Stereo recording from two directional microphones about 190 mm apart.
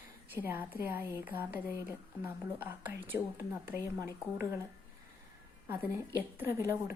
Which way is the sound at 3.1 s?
10° right (ahead or behind).